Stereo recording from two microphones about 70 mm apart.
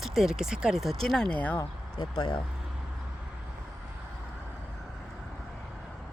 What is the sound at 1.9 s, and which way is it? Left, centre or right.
Speech, left.